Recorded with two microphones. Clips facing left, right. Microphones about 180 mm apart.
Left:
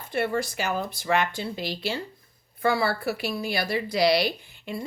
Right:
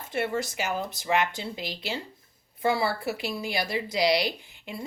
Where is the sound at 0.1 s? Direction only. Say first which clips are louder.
Left 2 dB; 20° right (ahead or behind).